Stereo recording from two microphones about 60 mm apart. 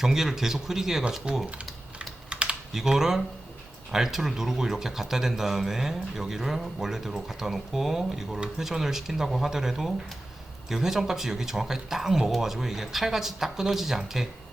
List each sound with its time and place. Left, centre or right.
0.0 s a man's voice: centre
2.0 s typing: centre
2.7 s a man's voice: centre